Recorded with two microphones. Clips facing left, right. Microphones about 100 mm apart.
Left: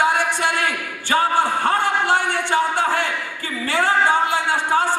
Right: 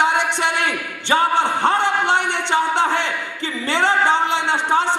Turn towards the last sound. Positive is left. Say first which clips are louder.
# right 1 dB
turn(degrees=-20)  # may be behind; listen again after turning